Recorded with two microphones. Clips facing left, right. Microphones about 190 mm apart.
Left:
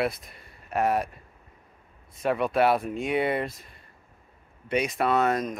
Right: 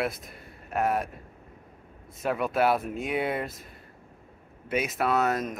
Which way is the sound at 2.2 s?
Centre (ahead or behind).